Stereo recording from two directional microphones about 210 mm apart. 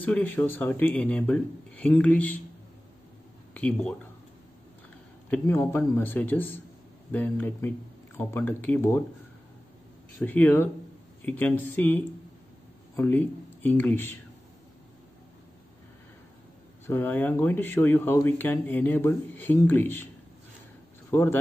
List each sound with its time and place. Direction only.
0.0 s speech: 10° left (ahead or behind)
3.5 s speech: 5° left (ahead or behind)
5.3 s speech: 10° left (ahead or behind)
10.1 s speech: 10° left (ahead or behind)
16.8 s speech: 10° left (ahead or behind)
21.1 s a man's voice: 10° left (ahead or behind)